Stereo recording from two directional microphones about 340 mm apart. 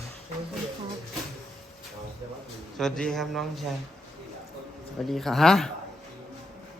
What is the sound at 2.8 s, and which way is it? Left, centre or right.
Speech, centre.